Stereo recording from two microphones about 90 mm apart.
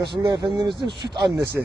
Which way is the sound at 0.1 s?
60° right (ahead or behind).